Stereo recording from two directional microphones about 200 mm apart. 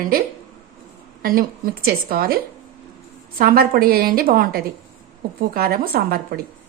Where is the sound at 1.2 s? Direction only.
45° right (ahead or behind).